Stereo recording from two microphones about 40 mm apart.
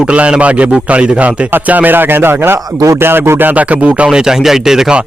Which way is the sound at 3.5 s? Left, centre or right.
Right.